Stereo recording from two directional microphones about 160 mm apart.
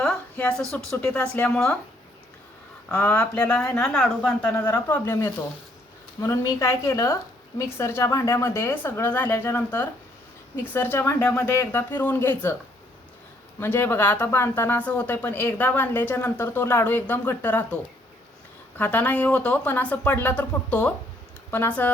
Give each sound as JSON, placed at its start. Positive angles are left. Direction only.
{"t": 0.0, "sound": "a woman's voice", "side_deg": 5}
{"t": 2.9, "sound": "speech", "side_deg": 10}
{"t": 10.9, "sound": "speech", "side_deg": 15}
{"t": 13.6, "sound": "speech", "side_deg": 15}
{"t": 18.8, "sound": "speech", "side_deg": 10}